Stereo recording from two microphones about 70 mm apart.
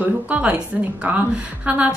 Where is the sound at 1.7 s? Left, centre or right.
Centre.